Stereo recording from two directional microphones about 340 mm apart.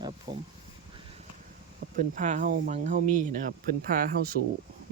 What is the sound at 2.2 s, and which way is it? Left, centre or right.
Speech, right.